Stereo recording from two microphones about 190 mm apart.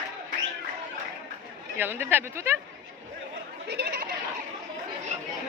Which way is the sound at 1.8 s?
10° right (ahead or behind).